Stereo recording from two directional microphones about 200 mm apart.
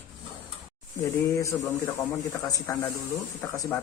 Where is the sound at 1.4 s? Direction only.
15° left (ahead or behind).